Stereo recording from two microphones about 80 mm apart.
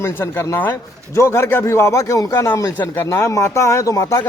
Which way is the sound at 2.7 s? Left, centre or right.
Left.